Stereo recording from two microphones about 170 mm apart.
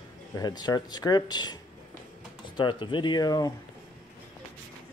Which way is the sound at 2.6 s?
30° left (ahead or behind).